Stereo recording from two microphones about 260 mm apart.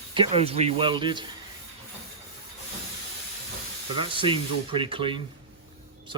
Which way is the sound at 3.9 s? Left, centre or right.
Centre.